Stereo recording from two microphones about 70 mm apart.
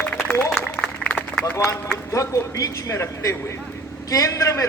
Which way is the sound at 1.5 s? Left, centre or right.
Left.